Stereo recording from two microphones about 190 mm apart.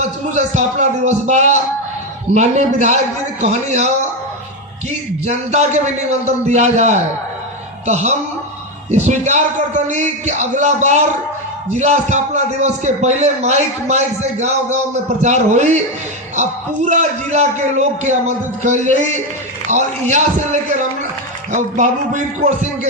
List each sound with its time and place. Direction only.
0.0 s a man's voice: 40° right (ahead or behind)